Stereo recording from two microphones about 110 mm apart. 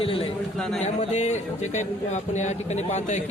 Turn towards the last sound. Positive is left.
turn(degrees=90)